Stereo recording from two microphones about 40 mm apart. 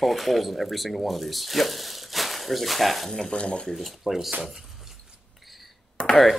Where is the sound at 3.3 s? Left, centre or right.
Left.